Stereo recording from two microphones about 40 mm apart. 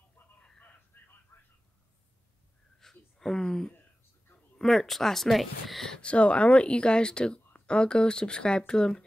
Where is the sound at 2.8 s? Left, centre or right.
Centre.